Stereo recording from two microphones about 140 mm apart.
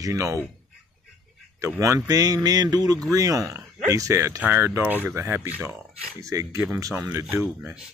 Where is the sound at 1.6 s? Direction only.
20° right (ahead or behind).